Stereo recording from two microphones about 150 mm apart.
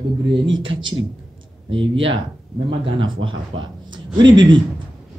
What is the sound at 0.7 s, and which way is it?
Speech, 35° right (ahead or behind).